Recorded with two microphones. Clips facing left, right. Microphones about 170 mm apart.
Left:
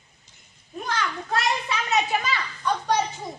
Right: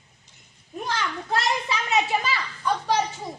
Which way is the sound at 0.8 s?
25° right (ahead or behind).